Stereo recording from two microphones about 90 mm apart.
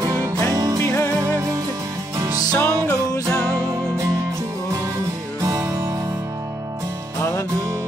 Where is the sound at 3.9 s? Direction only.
35° right (ahead or behind).